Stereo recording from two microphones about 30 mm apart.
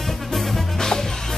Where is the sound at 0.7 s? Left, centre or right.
Centre.